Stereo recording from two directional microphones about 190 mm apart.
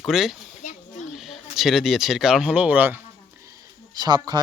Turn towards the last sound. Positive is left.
turn(degrees=-20)  # may be behind; listen again after turning